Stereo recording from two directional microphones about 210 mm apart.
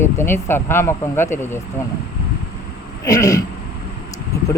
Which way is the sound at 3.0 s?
15° left (ahead or behind).